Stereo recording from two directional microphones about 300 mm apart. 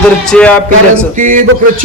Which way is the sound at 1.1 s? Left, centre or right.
Right.